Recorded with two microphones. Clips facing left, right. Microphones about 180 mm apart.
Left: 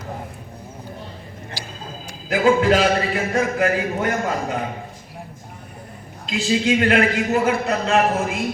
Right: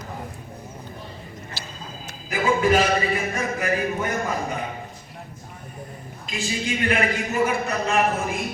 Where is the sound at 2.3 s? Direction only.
90° left.